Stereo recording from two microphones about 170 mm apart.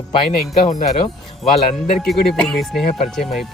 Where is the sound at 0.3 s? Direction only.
50° left (ahead or behind).